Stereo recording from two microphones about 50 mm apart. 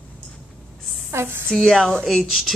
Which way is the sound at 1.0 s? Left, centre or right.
Right.